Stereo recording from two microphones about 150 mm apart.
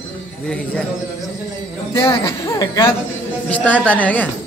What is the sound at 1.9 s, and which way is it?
Speech, 35° left (ahead or behind).